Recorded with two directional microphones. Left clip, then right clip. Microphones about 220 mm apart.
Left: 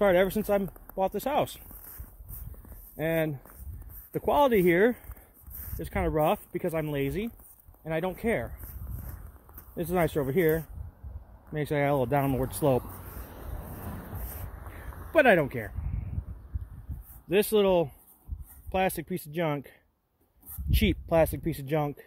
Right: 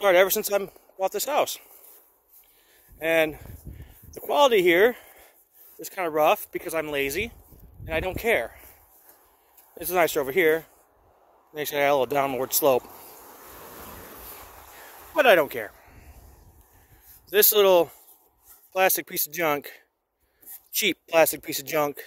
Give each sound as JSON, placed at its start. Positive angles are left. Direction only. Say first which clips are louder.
{"t": 0.0, "sound": "speech", "louder": "right 4 dB", "side_deg": -20}
{"t": 3.0, "sound": "speech", "louder": "right 6 dB", "side_deg": -25}
{"t": 9.8, "sound": "speech", "louder": "right 5 dB", "side_deg": -15}
{"t": 13.5, "sound": "a sound", "louder": "right 3 dB", "side_deg": -65}
{"t": 15.1, "sound": "speech", "louder": "right 3 dB", "side_deg": -20}
{"t": 17.3, "sound": "speech", "louder": "right 5 dB", "side_deg": -30}